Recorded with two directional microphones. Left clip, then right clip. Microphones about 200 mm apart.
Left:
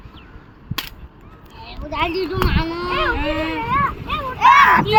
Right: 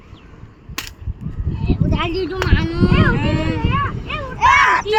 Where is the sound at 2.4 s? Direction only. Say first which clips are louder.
Right 2 dB; 40° right (ahead or behind).